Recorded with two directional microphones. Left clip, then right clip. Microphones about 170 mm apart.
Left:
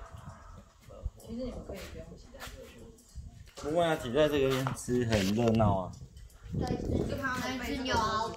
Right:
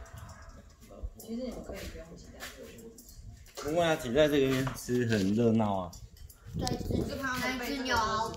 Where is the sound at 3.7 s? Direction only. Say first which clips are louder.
Right 1 dB; 15° left (ahead or behind).